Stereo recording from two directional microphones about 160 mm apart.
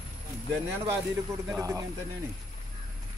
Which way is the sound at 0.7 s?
15° right (ahead or behind).